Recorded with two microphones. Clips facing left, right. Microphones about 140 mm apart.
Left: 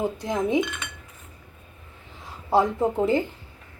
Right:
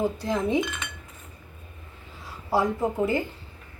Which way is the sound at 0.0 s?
15° left (ahead or behind).